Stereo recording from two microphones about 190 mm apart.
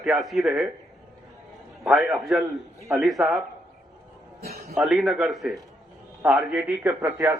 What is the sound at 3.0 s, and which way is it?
Speech, centre (ahead or behind).